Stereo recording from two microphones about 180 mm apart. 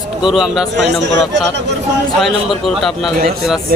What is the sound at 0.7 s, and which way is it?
Speech, 75° right (ahead or behind).